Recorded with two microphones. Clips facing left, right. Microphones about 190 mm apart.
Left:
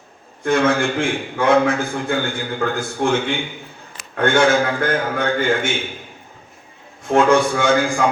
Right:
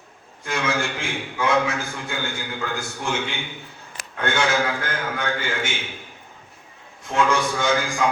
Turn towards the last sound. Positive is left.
turn(degrees=55)  # may be behind; listen again after turning